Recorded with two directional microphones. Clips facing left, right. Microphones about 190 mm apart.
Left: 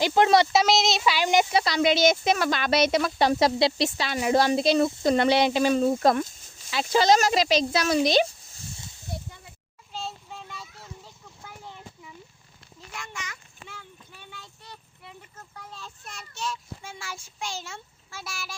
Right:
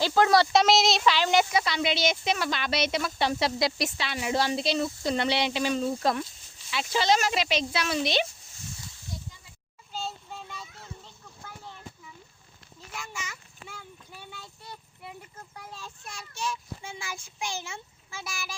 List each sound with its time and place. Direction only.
0.0 s speech: 20° left (ahead or behind)
0.5 s speech: centre (ahead or behind)
1.1 s speech: 15° left (ahead or behind)
1.5 s speech: 40° left (ahead or behind)
3.6 s speech: 30° left (ahead or behind)
3.9 s speech: 40° left (ahead or behind)
9.0 s snake: 60° left (ahead or behind)
9.9 s a sound: centre (ahead or behind)
12.9 s child singing: 5° right (ahead or behind)
15.5 s a child's voice: 10° right (ahead or behind)